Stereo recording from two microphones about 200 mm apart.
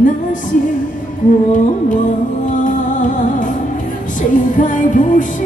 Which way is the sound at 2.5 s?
40° left (ahead or behind).